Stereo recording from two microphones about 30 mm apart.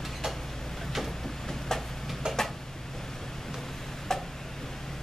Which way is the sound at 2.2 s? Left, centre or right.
Right.